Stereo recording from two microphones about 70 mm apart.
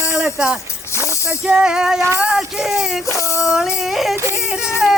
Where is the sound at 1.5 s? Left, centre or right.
Centre.